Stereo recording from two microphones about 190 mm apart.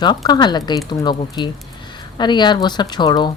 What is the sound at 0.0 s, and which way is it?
Speech, 20° left (ahead or behind).